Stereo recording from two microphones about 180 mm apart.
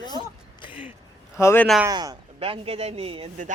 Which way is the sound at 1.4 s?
15° left (ahead or behind).